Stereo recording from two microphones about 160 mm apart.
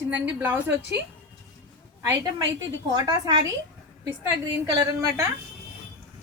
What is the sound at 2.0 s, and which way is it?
Speech, 20° right (ahead or behind).